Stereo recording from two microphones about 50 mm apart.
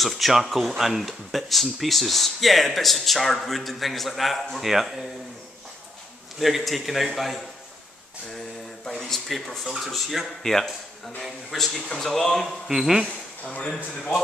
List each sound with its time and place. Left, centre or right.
0.0 s speech: centre
6.4 s speech: centre
8.9 s speech: centre
12.6 s speech: centre
13.0 s speech: left